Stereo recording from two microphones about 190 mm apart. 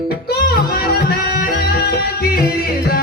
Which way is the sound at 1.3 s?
55° left (ahead or behind).